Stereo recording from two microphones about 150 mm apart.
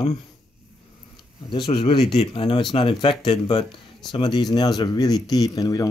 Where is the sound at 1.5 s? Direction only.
30° left (ahead or behind).